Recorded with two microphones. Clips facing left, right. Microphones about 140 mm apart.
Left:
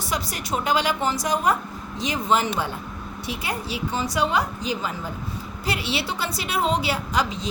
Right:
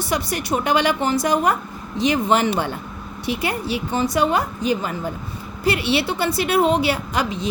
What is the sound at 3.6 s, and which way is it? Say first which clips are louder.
A woman's voice: right 5 dB; 60° right (ahead or behind).